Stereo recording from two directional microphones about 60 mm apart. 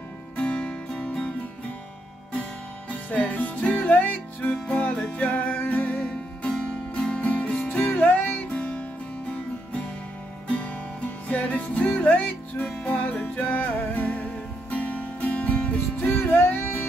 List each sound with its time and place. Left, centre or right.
0.4 s music: centre
2.9 s music: left
8.4 s music: centre
10.5 s music: left
16.2 s music: left